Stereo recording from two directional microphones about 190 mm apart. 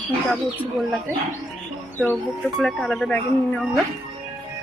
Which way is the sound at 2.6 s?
Centre (ahead or behind).